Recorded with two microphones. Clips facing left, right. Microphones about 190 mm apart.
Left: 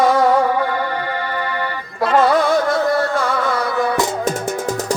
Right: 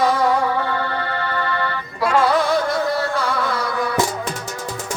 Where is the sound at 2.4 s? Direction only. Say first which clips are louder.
Left 3 dB; 50° left (ahead or behind).